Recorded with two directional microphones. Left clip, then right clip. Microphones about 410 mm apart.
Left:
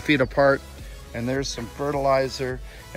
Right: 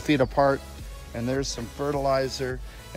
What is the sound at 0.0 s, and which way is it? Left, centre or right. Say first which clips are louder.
Speech: left 2 dB; centre.